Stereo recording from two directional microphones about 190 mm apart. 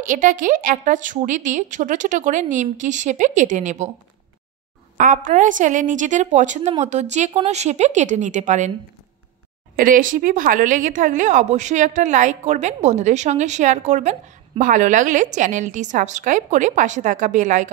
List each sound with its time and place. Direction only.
0.0 s a woman's voice: 45° right (ahead or behind)
4.9 s a woman's voice: 45° right (ahead or behind)
9.8 s a woman's voice: 45° right (ahead or behind)